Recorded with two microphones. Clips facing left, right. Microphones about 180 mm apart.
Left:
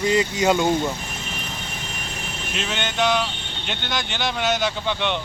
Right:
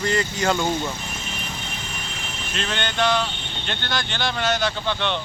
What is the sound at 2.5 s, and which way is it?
Speech, 10° left (ahead or behind).